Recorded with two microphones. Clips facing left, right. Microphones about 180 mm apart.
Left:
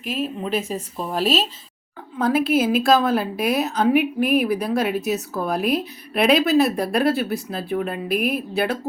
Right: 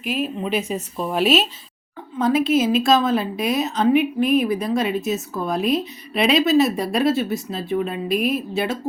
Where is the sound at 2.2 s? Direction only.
5° left (ahead or behind).